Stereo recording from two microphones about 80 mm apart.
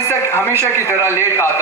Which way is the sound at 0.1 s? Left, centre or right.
Left.